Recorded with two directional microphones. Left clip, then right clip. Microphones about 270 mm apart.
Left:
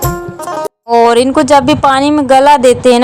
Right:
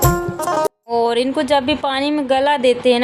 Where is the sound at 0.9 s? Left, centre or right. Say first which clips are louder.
Left 13 dB; left.